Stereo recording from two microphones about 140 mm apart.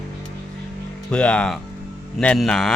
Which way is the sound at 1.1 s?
5° left (ahead or behind).